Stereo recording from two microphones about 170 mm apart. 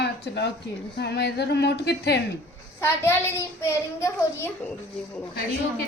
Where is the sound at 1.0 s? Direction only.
80° left.